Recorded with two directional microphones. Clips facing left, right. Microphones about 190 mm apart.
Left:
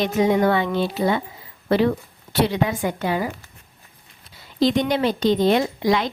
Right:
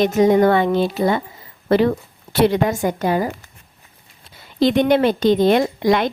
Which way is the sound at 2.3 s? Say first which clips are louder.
Right 5 dB; 50° right (ahead or behind).